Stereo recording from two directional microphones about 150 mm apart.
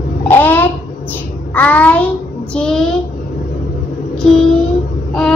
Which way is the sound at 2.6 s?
5° left (ahead or behind).